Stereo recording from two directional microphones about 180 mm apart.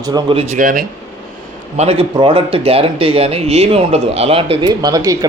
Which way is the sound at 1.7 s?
35° right (ahead or behind).